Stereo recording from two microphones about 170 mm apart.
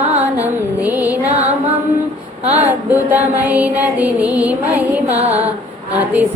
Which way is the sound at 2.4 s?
40° right (ahead or behind).